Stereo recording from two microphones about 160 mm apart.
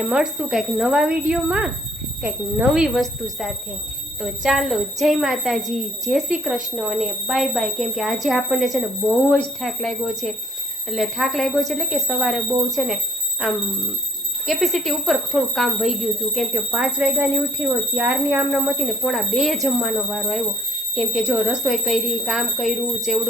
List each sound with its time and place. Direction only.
0.1 s a woman's voice: centre (ahead or behind)
14.4 s a woman's voice: centre (ahead or behind)
17.0 s a woman's voice: 15° right (ahead or behind)